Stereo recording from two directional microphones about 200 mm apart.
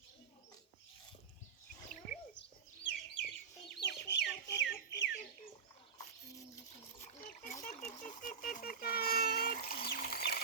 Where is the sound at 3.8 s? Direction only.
60° left (ahead or behind).